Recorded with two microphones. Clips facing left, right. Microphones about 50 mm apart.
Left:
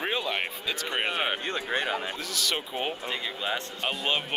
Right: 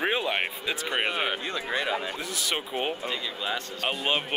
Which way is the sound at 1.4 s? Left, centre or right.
Left.